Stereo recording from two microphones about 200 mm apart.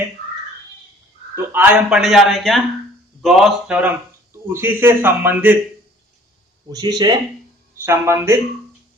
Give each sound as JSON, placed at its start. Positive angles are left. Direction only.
{"t": 1.5, "sound": "a man's voice", "side_deg": -5}
{"t": 6.7, "sound": "speech", "side_deg": -20}